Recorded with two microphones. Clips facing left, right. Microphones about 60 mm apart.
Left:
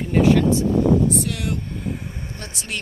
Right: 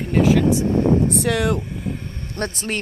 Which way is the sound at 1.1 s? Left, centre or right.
Right.